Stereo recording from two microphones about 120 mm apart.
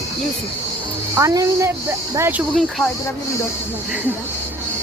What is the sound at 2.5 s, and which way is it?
Speech, 5° left (ahead or behind).